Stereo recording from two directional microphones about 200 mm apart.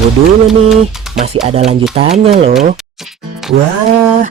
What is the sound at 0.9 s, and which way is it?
Speech, centre (ahead or behind).